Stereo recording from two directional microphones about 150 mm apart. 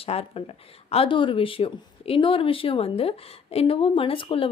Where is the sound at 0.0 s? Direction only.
40° left (ahead or behind).